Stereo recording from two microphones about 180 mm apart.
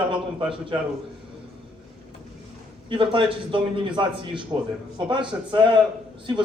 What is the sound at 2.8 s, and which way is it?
Speech, 25° right (ahead or behind).